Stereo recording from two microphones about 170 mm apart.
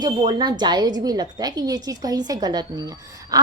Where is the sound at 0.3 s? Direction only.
25° right (ahead or behind).